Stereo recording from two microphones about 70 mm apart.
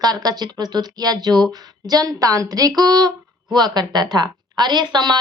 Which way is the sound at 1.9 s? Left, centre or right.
Right.